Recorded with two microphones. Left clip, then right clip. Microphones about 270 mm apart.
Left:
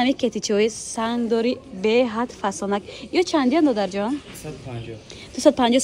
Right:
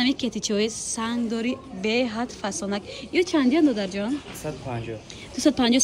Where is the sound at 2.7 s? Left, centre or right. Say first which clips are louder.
Left 2 dB; centre.